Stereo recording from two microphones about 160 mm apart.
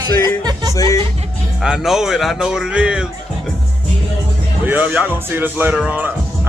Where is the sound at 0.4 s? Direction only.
25° right (ahead or behind).